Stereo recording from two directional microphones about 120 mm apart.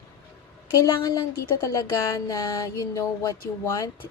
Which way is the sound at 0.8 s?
30° left (ahead or behind).